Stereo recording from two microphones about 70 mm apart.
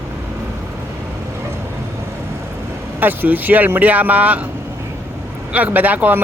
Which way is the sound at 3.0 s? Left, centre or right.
Right.